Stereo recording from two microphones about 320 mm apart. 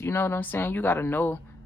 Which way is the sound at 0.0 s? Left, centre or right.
Centre.